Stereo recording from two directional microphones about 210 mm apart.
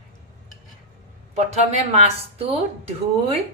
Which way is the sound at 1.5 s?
30° right (ahead or behind).